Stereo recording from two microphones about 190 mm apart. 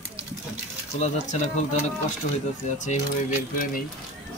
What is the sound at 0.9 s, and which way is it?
Speech, 35° left (ahead or behind).